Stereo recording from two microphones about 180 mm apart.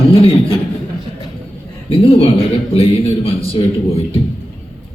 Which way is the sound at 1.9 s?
30° left (ahead or behind).